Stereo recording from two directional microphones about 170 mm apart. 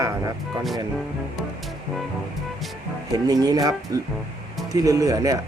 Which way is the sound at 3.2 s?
20° right (ahead or behind).